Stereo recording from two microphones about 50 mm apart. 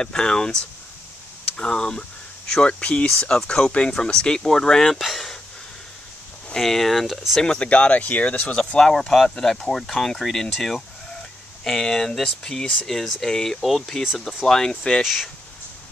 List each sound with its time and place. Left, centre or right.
0.0 s speech: centre
3.1 s speech: centre
6.5 s speech: centre
7.4 s speech: left
8.5 s speech: centre